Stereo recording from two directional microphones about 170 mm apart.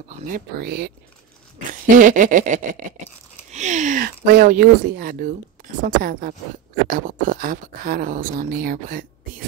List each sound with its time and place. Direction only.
0.3 s speech: 65° right (ahead or behind)
1.7 s speech: 50° right (ahead or behind)